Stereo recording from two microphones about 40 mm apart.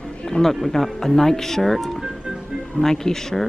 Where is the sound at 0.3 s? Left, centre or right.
Centre.